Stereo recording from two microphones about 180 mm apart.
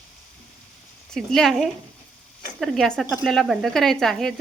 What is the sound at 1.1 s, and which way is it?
Speech, centre (ahead or behind).